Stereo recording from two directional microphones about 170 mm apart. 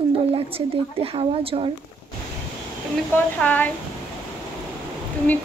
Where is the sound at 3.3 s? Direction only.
10° left (ahead or behind).